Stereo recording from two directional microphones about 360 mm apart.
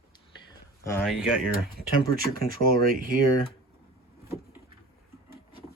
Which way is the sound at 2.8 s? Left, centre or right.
Right.